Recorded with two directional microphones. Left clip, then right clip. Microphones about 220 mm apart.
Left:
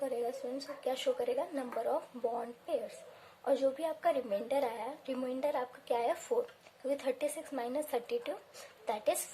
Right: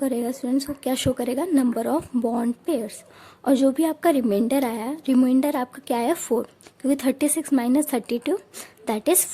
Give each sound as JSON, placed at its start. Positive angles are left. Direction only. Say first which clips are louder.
{"t": 0.0, "sound": "a woman's voice", "louder": "right 10 dB", "side_deg": -45}